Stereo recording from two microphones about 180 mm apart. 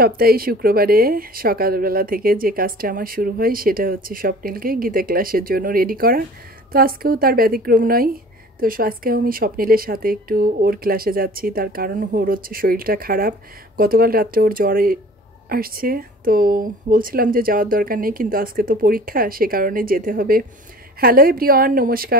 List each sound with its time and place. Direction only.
0.0 s speech: 55° right (ahead or behind)